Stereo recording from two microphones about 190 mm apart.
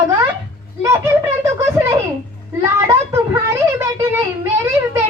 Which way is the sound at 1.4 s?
15° right (ahead or behind).